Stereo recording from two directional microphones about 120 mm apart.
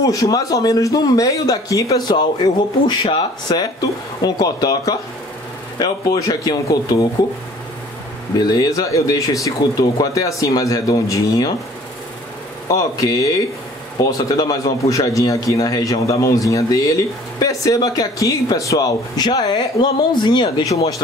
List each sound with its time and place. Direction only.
0.0 s a man's voice: 30° left (ahead or behind)
8.4 s speech: 35° left (ahead or behind)
12.6 s a man's voice: 30° left (ahead or behind)